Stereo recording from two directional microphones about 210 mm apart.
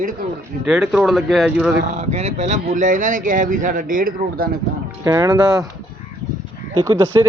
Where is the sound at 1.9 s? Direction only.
30° right (ahead or behind).